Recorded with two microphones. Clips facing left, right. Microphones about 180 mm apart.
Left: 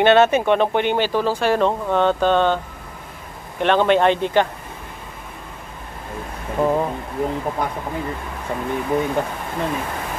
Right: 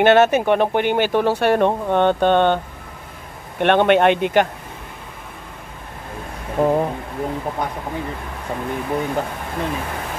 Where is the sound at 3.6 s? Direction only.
60° right (ahead or behind).